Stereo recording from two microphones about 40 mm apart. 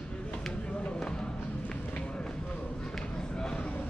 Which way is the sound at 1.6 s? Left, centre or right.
Left.